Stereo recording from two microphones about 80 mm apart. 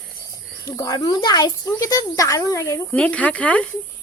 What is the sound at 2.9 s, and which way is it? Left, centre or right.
Speech, centre.